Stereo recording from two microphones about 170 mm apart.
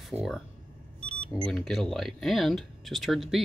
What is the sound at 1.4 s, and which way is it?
Speech, centre (ahead or behind).